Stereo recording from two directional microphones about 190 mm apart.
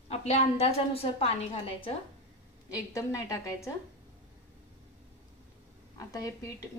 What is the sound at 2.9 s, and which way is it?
Speech, 15° left (ahead or behind).